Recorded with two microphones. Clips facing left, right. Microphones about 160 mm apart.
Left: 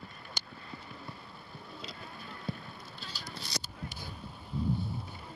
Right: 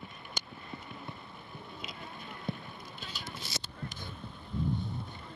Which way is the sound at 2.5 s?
20° right (ahead or behind).